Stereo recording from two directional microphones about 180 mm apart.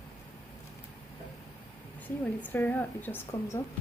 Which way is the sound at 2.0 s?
10° left (ahead or behind).